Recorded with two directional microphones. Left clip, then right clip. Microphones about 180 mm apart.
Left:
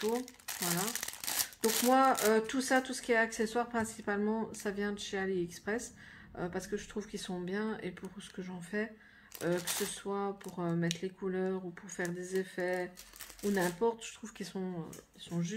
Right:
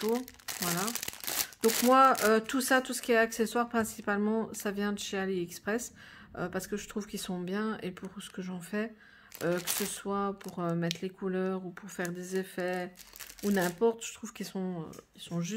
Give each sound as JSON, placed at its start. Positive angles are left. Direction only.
{"t": 0.0, "sound": "crumpling", "side_deg": -25}
{"t": 1.9, "sound": "speech", "side_deg": -45}
{"t": 9.9, "sound": "speech", "side_deg": -50}